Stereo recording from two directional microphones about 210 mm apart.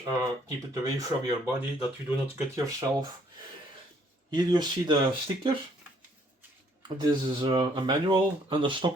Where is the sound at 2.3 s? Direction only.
15° right (ahead or behind).